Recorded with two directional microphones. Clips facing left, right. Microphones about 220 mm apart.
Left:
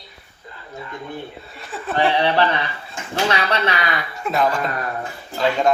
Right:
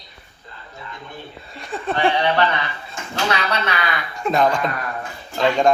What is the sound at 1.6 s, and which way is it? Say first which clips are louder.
Speech: right 4 dB; 5° left (ahead or behind).